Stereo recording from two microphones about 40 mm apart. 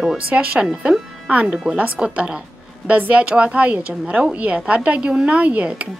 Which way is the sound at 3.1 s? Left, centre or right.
Right.